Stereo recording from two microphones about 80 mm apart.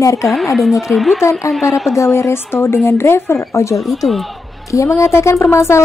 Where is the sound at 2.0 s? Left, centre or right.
Left.